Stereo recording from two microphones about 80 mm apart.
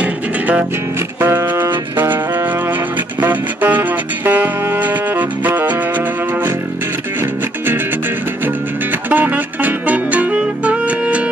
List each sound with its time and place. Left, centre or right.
0.0 s music: centre
1.2 s music: right
9.1 s music: right